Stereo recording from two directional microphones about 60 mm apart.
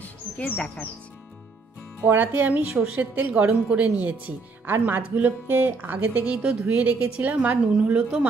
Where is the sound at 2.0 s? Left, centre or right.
Right.